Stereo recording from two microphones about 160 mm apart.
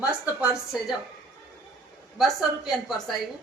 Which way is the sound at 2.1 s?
Centre (ahead or behind).